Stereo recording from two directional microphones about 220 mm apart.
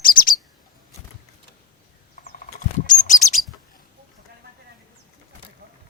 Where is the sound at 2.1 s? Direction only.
35° left (ahead or behind).